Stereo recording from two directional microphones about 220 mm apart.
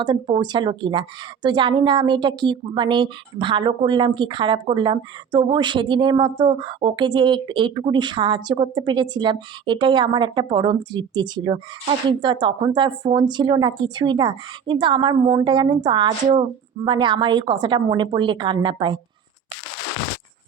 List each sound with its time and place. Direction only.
0.0 s a woman's voice: 20° right (ahead or behind)